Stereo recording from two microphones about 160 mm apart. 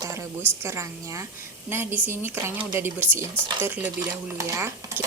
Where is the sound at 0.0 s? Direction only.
20° right (ahead or behind).